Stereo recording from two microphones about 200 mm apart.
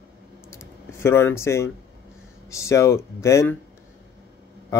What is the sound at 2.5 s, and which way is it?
Speech, 15° left (ahead or behind).